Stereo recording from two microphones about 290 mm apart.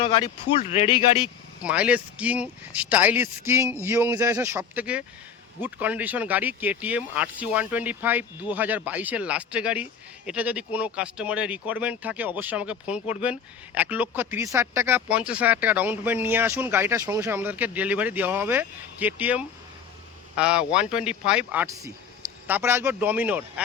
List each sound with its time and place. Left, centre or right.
0.0 s speech: centre
1.6 s a man's voice: centre